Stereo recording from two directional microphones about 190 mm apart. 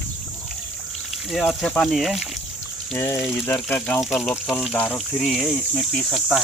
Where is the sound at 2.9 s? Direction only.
15° left (ahead or behind).